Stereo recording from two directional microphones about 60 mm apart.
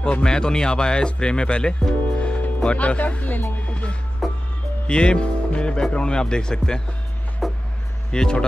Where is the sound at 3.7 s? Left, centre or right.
Centre.